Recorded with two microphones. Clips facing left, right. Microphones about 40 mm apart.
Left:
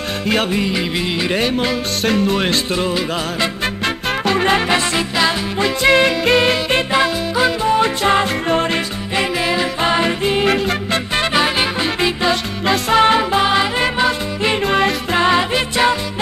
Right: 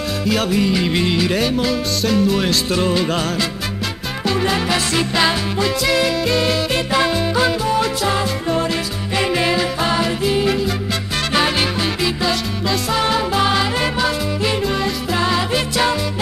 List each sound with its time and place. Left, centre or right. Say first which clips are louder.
0.3 s music: even; left
0.8 s music: right 2 dB; centre
1.1 s music: even; left
2.7 s music: right 1 dB; centre
3.8 s music: left 5 dB; left
6.9 s music: left 1 dB; centre
7.6 s music: left 3 dB; left
9.3 s music: right 4 dB; centre
9.6 s music: left 2 dB; left
10.4 s music: left 2 dB; left
11.3 s music: even; centre
11.6 s music: left 2 dB; left
14.6 s music: left 4 dB; left
15.1 s music: left 4 dB; left